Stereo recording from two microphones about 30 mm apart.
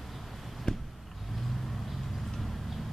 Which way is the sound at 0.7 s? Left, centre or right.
Left.